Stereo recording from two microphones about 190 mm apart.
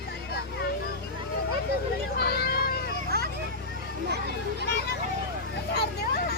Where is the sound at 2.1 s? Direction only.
55° left (ahead or behind).